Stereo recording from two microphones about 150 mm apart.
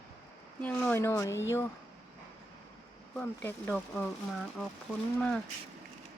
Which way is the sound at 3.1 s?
10° left (ahead or behind).